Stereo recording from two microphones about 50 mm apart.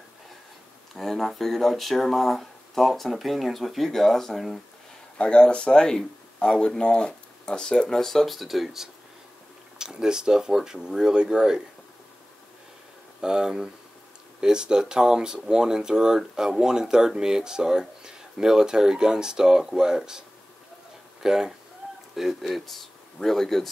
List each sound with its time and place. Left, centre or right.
0.9 s speech: centre
5.1 s speech: centre
8.1 s speech: centre
13.2 s speech: centre